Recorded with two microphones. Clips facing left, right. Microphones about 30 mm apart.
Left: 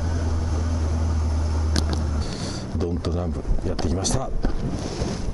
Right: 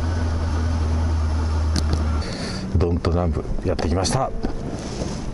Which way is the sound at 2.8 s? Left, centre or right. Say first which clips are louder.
Right 6 dB; right.